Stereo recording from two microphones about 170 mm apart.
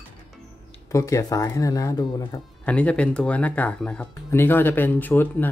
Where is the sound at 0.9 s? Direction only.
20° left (ahead or behind).